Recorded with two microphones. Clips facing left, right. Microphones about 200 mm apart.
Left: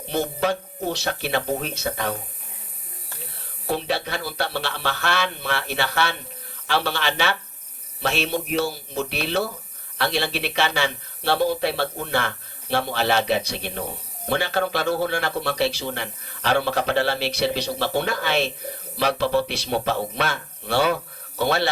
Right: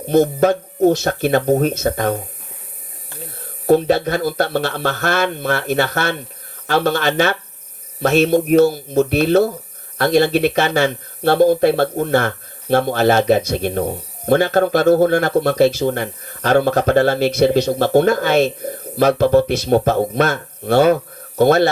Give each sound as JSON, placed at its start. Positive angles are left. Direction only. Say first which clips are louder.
{"t": 0.0, "sound": "speech", "louder": "right 10 dB", "side_deg": -45}
{"t": 3.7, "sound": "speech", "louder": "right 11 dB", "side_deg": -45}